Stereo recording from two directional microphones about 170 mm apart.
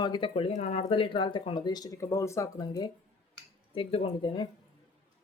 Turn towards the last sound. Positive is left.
turn(degrees=30)  # may be behind; listen again after turning